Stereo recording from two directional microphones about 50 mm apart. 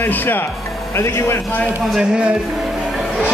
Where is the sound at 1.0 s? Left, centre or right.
Left.